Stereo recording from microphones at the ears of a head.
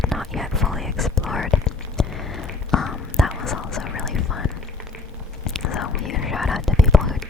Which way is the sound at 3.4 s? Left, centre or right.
Left.